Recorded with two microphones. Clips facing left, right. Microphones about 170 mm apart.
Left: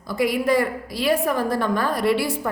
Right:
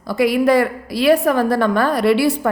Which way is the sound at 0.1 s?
75° right (ahead or behind).